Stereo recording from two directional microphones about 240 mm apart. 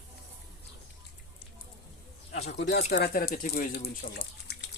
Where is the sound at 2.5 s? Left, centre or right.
Left.